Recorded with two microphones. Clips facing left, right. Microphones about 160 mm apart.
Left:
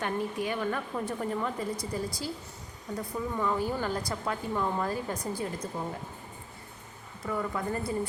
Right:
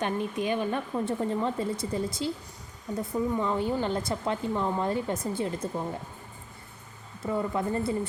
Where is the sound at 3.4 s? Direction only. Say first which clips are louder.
Right 2 dB; 20° right (ahead or behind).